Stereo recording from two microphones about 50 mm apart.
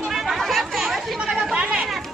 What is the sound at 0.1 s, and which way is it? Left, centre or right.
Chatter, centre.